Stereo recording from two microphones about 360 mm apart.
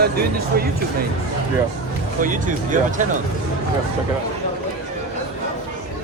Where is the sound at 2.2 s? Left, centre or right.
Right.